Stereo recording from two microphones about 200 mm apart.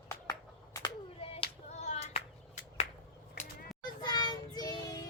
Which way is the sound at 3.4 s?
40° left (ahead or behind).